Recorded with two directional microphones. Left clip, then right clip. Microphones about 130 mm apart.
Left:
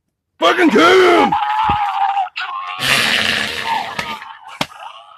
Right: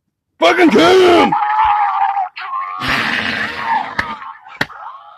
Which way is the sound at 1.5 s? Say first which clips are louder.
Right 3 dB; 15° left (ahead or behind).